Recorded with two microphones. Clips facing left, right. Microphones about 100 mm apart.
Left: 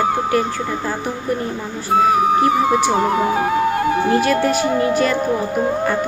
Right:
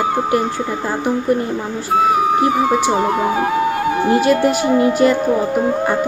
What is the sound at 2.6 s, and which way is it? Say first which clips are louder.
Speech: right 1 dB; centre (ahead or behind).